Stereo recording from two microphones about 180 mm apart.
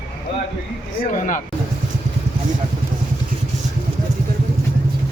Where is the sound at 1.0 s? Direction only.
45° left (ahead or behind).